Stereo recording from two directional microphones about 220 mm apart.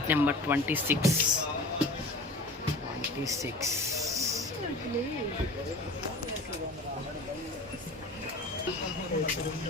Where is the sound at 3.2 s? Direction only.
15° right (ahead or behind).